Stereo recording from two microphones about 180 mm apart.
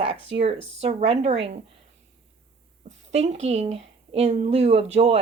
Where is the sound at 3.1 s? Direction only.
35° right (ahead or behind).